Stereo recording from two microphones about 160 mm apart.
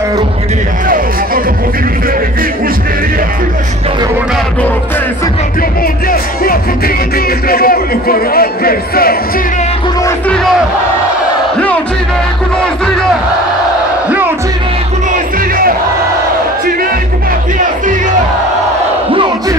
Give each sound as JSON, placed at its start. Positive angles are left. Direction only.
{"t": 0.8, "sound": "speech", "side_deg": -60}
{"t": 6.0, "sound": "speech", "side_deg": 65}
{"t": 10.0, "sound": "a man's voice", "side_deg": 5}
{"t": 11.5, "sound": "speech", "side_deg": 10}